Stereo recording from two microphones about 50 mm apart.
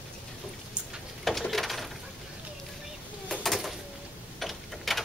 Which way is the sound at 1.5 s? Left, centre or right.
Centre.